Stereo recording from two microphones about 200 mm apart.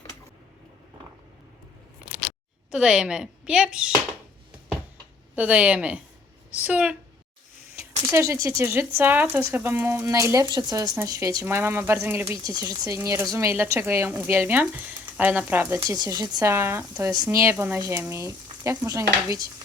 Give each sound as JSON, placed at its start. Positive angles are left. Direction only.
{"t": 2.7, "sound": "speech", "side_deg": -5}
{"t": 5.3, "sound": "speech", "side_deg": -5}
{"t": 8.0, "sound": "speech", "side_deg": -15}